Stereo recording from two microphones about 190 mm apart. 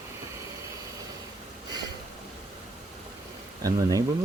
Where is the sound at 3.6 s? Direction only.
20° right (ahead or behind).